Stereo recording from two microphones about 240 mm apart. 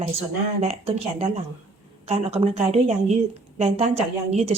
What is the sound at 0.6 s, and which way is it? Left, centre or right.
Speech, right.